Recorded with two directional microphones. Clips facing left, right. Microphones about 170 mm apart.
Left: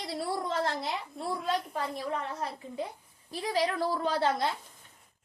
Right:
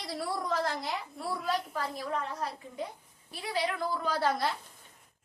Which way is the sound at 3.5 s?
35° left (ahead or behind).